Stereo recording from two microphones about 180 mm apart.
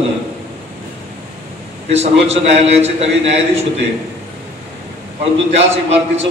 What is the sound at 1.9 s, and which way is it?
A man's voice, 35° right (ahead or behind).